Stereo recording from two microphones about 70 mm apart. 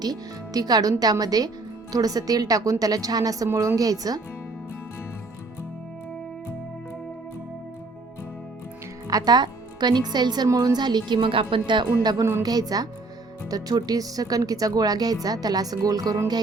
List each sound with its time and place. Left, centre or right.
0.0 s speech: right
9.0 s a woman's voice: right
12.4 s a woman's voice: right